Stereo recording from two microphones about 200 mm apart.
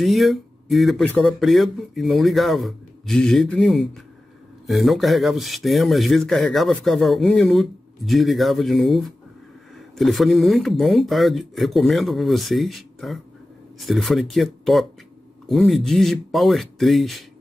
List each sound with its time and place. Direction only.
0.0 s speech: centre (ahead or behind)